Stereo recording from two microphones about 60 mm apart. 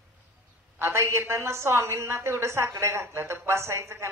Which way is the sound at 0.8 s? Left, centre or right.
Right.